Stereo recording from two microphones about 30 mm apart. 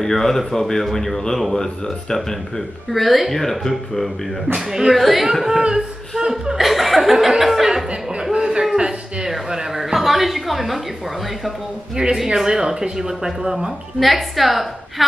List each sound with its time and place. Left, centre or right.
0.0 s speech: centre
2.9 s speech: centre
4.6 s speech: centre
4.9 s speech: centre
7.7 s a sound: centre
9.9 s a sound: centre
12.0 s speech: right
12.4 s speech: centre
13.9 s speech: centre